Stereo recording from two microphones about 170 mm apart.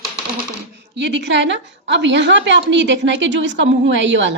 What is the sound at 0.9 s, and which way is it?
A woman's voice, 90° right.